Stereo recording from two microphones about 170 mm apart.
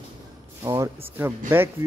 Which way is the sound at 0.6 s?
15° right (ahead or behind).